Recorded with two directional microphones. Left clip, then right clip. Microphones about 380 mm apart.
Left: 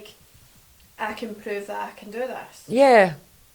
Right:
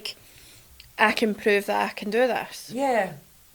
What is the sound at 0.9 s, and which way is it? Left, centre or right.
Speech, right.